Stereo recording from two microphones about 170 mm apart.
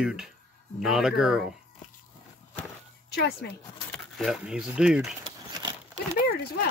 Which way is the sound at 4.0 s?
Centre (ahead or behind).